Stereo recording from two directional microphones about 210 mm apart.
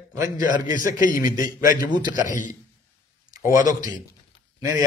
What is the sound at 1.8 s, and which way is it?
Speech, 20° right (ahead or behind).